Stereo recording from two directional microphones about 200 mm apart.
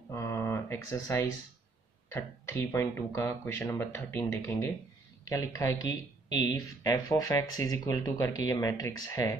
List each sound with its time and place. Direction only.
0.1 s speech: 15° left (ahead or behind)
2.7 s speech: 15° left (ahead or behind)